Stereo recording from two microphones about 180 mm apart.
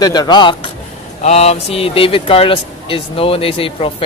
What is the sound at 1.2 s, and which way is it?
Speech, 35° left (ahead or behind).